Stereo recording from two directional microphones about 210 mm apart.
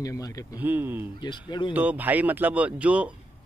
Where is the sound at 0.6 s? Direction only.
10° right (ahead or behind).